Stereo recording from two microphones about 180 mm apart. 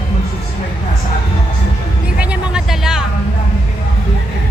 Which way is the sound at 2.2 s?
5° right (ahead or behind).